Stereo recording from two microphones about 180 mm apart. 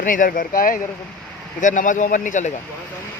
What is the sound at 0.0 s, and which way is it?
A man's voice, 50° left (ahead or behind).